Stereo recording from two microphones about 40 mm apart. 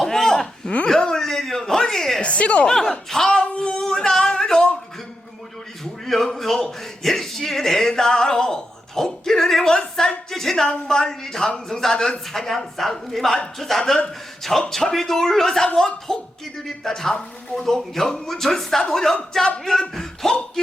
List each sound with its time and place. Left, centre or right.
0.0 s a sound: centre
0.9 s speech: centre
1.2 s a sound: centre
2.2 s a woman's voice: left
2.6 s speech: centre
3.2 s child singing: left
3.8 s music: centre
5.8 s a sound: centre
9.9 s music: centre
10.7 s speech: centre